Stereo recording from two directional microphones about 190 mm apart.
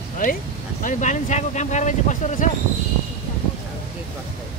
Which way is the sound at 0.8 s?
40° left (ahead or behind).